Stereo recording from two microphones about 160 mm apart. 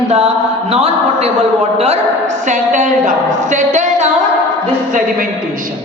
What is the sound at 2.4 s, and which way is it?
A woman's voice, 50° right (ahead or behind).